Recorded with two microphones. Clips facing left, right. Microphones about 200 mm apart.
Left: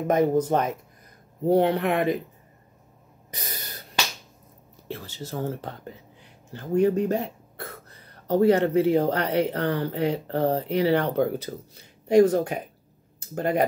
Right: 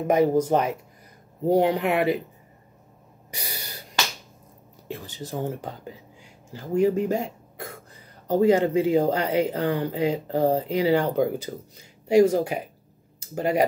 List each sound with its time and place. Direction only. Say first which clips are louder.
0.1 s speech: right 1 dB; 10° right (ahead or behind)
3.3 s snort: right 1 dB; 10° right (ahead or behind)
4.8 s speech: right 1 dB; 15° right (ahead or behind)